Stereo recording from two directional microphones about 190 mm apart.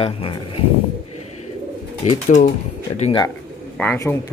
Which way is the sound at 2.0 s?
40° left (ahead or behind).